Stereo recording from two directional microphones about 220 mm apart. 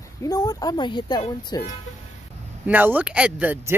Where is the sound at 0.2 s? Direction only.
15° left (ahead or behind).